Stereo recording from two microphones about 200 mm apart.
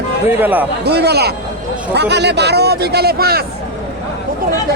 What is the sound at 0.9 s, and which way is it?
Speech, 55° right (ahead or behind).